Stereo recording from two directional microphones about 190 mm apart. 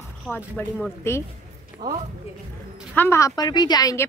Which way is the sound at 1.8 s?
20° right (ahead or behind).